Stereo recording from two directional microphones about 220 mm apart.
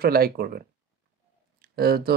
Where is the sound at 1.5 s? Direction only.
45° right (ahead or behind).